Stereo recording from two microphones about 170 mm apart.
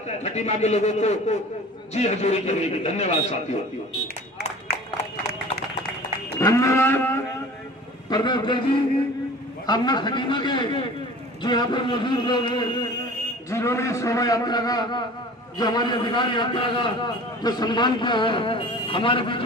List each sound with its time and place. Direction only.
0.2 s a man's voice: 40° left (ahead or behind)
6.4 s livestock: 20° left (ahead or behind)
8.1 s a man's voice: 25° left (ahead or behind)
9.6 s a man's voice: 25° left (ahead or behind)
13.5 s a man's voice: 15° left (ahead or behind)